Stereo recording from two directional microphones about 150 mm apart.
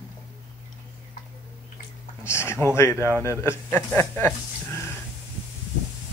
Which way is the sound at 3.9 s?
15° left (ahead or behind).